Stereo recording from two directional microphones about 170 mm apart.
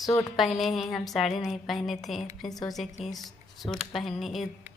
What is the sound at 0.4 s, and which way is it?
A woman's voice, centre (ahead or behind).